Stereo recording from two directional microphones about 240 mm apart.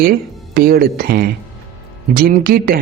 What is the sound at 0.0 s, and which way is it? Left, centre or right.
Speech, right.